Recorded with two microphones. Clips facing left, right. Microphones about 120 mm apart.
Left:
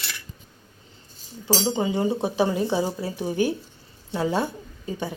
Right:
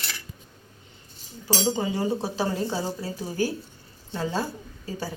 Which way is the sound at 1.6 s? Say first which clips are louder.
Left 1 dB; 20° left (ahead or behind).